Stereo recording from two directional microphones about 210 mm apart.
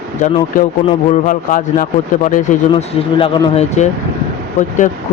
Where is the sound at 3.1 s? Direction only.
25° left (ahead or behind).